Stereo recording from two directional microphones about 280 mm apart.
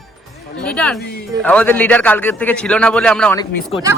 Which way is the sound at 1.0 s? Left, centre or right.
Left.